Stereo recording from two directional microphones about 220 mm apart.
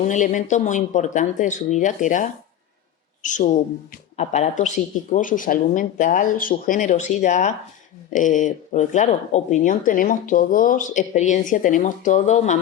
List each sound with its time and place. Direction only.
0.0 s speech: 35° left (ahead or behind)
3.2 s speech: 35° left (ahead or behind)